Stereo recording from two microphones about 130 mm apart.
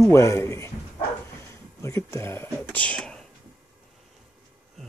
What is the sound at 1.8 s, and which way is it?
Speech, 20° left (ahead or behind).